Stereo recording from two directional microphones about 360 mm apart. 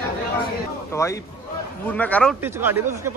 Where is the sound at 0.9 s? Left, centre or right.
Centre.